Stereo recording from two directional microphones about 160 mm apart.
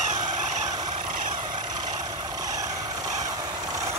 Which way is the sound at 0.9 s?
55° right (ahead or behind).